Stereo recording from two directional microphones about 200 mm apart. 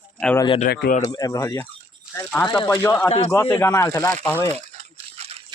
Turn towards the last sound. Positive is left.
turn(degrees=-30)  # may be behind; listen again after turning